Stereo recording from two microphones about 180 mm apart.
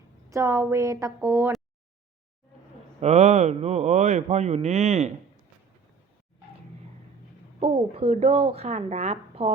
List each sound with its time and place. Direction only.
0.3 s a woman's voice: 15° right (ahead or behind)
3.0 s speech: 40° right (ahead or behind)
7.6 s speech: 35° right (ahead or behind)